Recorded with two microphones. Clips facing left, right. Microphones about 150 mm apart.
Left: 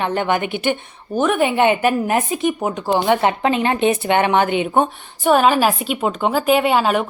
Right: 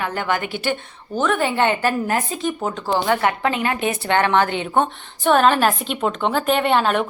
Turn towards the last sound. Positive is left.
turn(degrees=5)  # may be behind; listen again after turning